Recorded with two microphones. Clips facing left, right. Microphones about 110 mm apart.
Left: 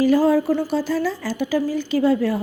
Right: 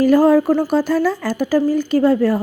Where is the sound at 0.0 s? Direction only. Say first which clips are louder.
Right 4 dB; 50° right (ahead or behind).